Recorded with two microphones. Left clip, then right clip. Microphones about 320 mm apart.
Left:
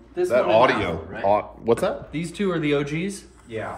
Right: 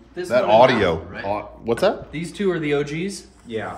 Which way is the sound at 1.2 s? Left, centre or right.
Centre.